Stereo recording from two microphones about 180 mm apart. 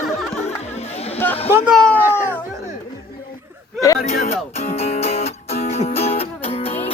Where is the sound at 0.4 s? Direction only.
35° left (ahead or behind).